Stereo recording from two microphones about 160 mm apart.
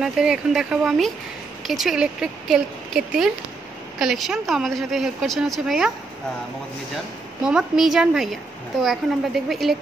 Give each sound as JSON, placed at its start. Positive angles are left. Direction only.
{"t": 0.0, "sound": "speech", "side_deg": -5}
{"t": 7.4, "sound": "speech", "side_deg": -5}